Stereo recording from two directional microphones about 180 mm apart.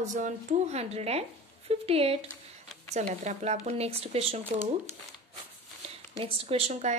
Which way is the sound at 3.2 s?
40° right (ahead or behind).